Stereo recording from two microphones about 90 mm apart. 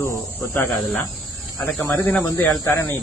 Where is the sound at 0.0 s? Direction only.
25° left (ahead or behind).